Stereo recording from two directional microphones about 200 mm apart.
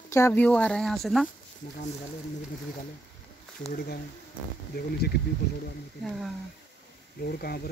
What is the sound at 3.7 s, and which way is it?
Speech, 50° left (ahead or behind).